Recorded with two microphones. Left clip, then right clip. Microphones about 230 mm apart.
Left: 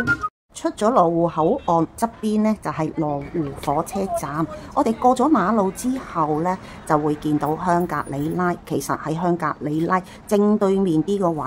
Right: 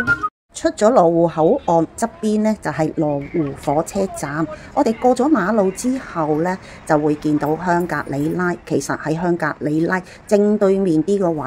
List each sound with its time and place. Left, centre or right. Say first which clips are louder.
0.0 s music: right 3 dB; centre
0.6 s a woman's voice: right 4 dB; centre